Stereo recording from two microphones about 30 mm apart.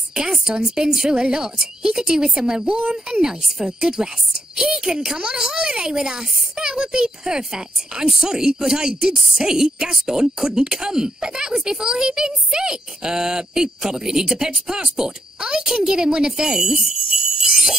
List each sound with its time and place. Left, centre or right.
0.1 s a child's voice: right
2.6 s speech: right
3.1 s a woman's voice: right
3.4 s a woman's voice: centre
3.8 s a child's voice: right